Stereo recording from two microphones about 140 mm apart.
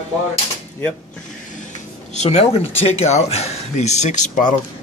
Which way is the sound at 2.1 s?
50° left (ahead or behind).